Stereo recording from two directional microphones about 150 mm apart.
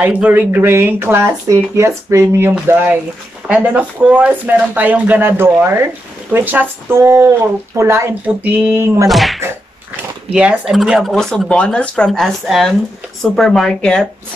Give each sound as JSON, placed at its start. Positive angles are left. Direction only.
{"t": 0.0, "sound": "speech", "side_deg": -10}
{"t": 9.1, "sound": "speech", "side_deg": 0}